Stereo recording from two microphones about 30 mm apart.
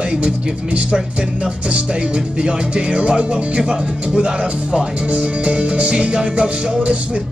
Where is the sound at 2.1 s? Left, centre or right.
Right.